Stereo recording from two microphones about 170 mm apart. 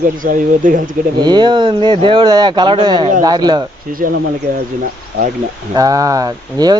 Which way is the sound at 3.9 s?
55° right (ahead or behind).